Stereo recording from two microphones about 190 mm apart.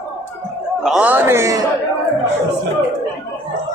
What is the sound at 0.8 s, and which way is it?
Speech, 5° right (ahead or behind).